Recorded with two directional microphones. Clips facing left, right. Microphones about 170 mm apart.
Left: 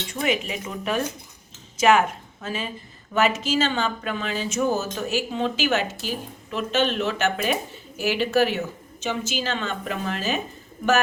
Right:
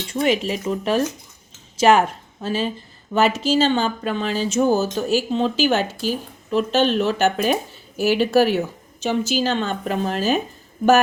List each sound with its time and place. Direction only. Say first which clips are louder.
0.1 s speech: right 6 dB; 30° right (ahead or behind)